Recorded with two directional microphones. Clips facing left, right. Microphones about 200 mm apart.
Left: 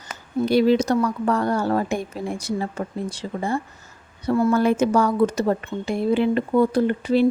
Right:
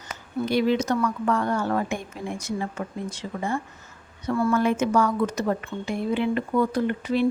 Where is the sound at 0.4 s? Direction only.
35° left (ahead or behind).